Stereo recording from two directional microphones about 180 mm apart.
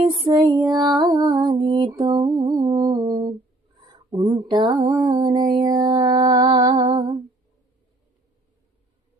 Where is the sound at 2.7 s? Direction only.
20° right (ahead or behind).